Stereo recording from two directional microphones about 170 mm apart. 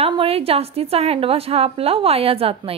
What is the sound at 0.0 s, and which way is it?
A woman's voice, 35° right (ahead or behind).